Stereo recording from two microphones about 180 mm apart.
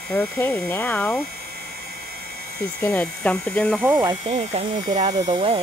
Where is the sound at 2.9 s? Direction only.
5° left (ahead or behind).